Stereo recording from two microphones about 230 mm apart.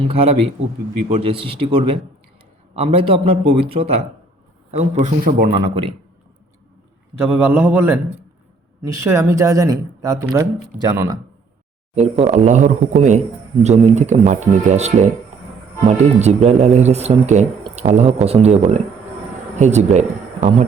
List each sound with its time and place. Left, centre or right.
0.0 s speech: right
2.7 s speech: right
5.5 s speech: right
7.3 s speech: centre
11.9 s speech: right